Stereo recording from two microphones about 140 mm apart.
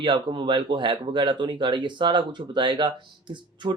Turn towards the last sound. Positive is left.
turn(degrees=-35)  # may be behind; listen again after turning